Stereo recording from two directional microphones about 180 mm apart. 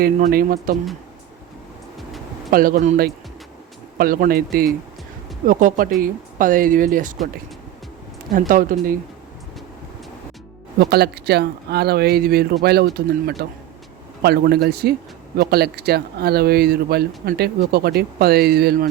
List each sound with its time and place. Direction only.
0.0 s speech: 55° right (ahead or behind)
2.5 s speech: 50° right (ahead or behind)
3.9 s speech: 55° right (ahead or behind)
8.3 s speech: 50° right (ahead or behind)
10.8 s speech: 65° right (ahead or behind)